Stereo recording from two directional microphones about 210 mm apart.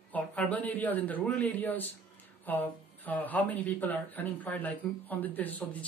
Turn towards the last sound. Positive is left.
turn(degrees=10)  # may be behind; listen again after turning